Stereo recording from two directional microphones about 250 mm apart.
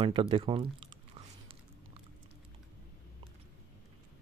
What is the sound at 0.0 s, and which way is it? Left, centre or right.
Speech, right.